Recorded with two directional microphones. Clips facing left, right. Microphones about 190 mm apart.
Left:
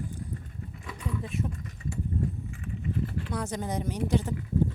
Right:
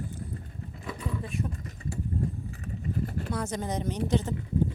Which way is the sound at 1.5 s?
35° right (ahead or behind).